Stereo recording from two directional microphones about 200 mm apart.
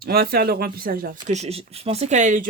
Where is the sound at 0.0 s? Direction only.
50° right (ahead or behind).